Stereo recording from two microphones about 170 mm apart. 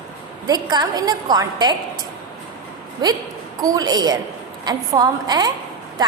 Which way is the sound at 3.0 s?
25° right (ahead or behind).